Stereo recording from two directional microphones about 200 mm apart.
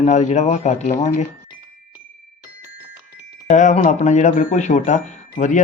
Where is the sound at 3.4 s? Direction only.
35° left (ahead or behind).